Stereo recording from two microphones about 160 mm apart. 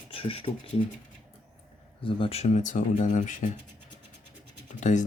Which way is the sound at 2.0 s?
35° left (ahead or behind).